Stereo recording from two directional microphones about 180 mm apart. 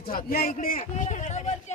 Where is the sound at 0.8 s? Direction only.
40° left (ahead or behind).